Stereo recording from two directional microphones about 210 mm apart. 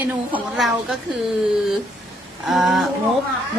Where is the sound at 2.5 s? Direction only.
Centre (ahead or behind).